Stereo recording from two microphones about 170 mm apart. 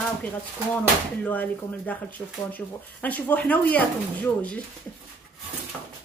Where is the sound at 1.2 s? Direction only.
10° left (ahead or behind).